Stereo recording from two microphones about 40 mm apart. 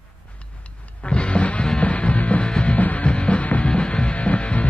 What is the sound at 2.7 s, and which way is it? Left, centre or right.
Music, left.